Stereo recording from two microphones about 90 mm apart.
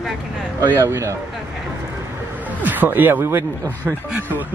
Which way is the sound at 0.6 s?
30° right (ahead or behind).